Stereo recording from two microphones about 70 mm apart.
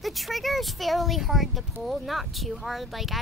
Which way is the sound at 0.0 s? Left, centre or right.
Centre.